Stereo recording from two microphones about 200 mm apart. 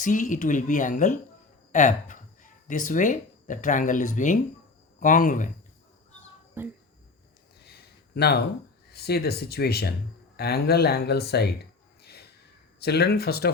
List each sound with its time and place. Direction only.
0.0 s speech: 40° left (ahead or behind)
6.6 s speech: 10° right (ahead or behind)
7.6 s a sound: 55° left (ahead or behind)
8.9 s speech: 55° left (ahead or behind)
12.0 s snort: 55° left (ahead or behind)
12.8 s speech: 55° left (ahead or behind)